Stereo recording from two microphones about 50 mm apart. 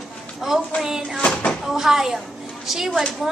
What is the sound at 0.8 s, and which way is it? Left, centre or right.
Speech, centre.